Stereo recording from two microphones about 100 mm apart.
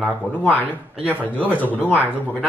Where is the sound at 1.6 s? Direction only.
15° left (ahead or behind).